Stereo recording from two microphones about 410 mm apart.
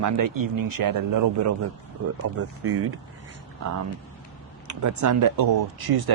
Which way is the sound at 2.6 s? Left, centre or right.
Right.